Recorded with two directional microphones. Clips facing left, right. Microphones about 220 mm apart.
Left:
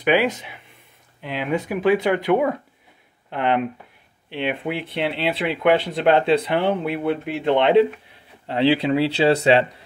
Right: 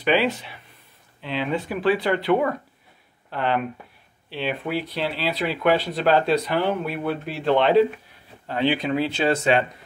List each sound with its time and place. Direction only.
0.0 s speech: 15° left (ahead or behind); by 9.7 s 30° left (ahead or behind)